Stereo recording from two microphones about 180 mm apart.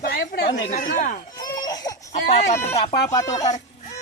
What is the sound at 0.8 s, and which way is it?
Speech, 45° left (ahead or behind).